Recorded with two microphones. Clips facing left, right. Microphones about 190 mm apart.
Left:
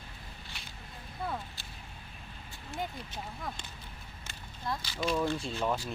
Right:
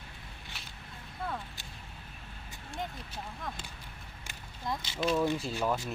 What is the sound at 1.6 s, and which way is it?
Whip, 15° right (ahead or behind).